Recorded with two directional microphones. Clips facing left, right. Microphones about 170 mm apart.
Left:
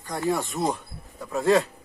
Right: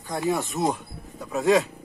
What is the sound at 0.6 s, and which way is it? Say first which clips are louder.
Speech: right 1 dB; centre (ahead or behind).